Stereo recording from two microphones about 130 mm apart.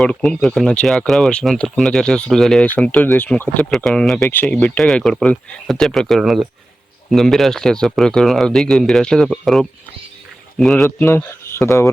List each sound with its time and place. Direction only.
0.0 s speech: 5° left (ahead or behind)
10.8 s speech: 20° left (ahead or behind)